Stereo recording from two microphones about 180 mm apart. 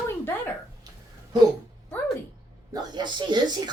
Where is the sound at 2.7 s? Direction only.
25° right (ahead or behind).